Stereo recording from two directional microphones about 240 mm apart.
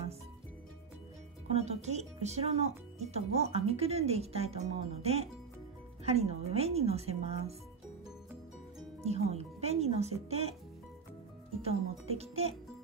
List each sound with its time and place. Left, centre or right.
1.5 s speech: right
9.0 s speech: right
11.6 s speech: right